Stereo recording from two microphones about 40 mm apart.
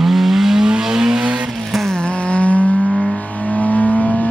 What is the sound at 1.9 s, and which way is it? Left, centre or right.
Vehicle, left.